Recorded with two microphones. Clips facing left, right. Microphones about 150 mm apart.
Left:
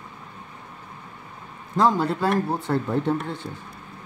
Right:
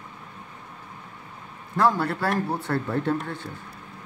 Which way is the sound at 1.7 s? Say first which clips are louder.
Left 2 dB; 20° left (ahead or behind).